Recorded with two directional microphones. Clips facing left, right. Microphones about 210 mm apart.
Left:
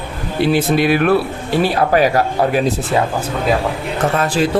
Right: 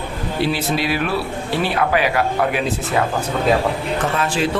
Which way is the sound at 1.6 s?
40° left (ahead or behind).